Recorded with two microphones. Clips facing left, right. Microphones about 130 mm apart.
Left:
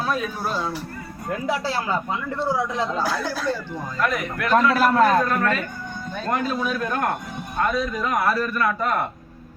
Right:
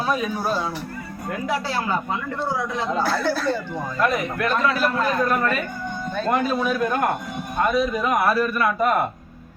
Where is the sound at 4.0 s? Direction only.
25° right (ahead or behind).